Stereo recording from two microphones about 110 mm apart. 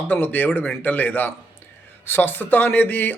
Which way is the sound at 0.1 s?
15° left (ahead or behind).